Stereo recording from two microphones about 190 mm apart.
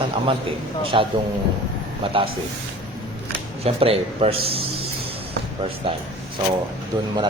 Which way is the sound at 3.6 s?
30° right (ahead or behind).